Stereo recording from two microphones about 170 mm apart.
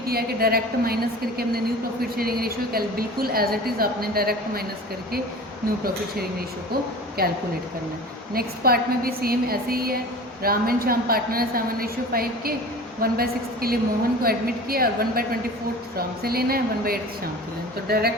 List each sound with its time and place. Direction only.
0.1 s a woman's voice: 65° right (ahead or behind)
7.2 s a woman's voice: 60° right (ahead or behind)